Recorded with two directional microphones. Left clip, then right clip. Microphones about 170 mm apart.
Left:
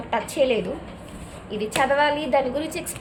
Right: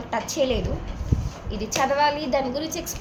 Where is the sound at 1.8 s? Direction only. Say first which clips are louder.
Left 1 dB; 25° left (ahead or behind).